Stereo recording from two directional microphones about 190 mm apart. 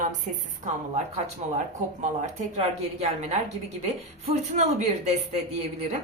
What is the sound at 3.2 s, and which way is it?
A woman's voice, 35° right (ahead or behind).